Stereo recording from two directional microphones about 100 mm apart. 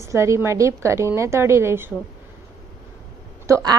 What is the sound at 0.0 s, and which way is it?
A woman's voice, 30° right (ahead or behind).